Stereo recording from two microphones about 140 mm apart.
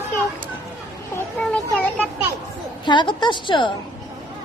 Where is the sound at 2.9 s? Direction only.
35° left (ahead or behind).